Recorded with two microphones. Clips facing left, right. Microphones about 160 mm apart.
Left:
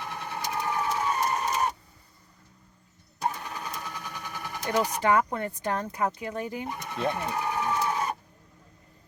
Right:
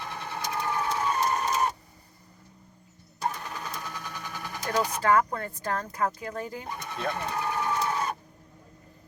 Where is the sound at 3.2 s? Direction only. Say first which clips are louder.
Left 1 dB; 10° left (ahead or behind).